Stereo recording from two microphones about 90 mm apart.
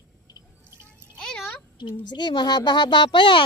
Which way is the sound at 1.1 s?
5° left (ahead or behind).